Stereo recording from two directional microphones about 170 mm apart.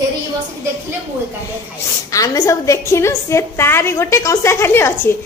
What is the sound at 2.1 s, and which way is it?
A woman's voice, 20° left (ahead or behind).